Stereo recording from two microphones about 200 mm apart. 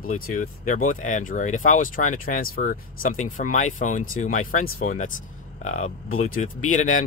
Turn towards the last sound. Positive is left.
turn(degrees=40)  # may be behind; listen again after turning